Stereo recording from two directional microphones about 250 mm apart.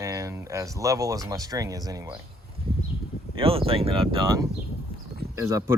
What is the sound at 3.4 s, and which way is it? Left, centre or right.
Speech, right.